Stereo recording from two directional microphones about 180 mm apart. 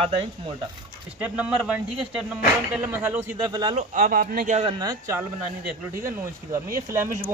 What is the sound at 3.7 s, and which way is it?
Speech, 45° right (ahead or behind).